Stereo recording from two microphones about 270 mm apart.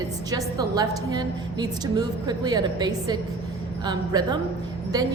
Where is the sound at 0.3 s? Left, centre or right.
Centre.